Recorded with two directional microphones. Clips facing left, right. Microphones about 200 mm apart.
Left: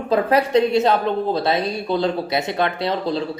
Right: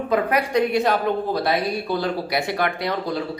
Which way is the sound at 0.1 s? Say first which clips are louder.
Left 4 dB; 25° left (ahead or behind).